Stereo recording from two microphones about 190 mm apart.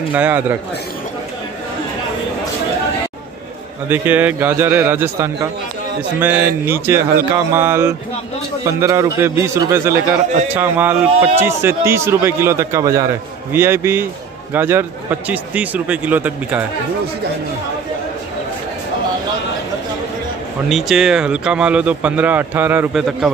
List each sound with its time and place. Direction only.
0.1 s speech: 10° right (ahead or behind)
3.9 s speech: 10° right (ahead or behind)
20.6 s speech: centre (ahead or behind)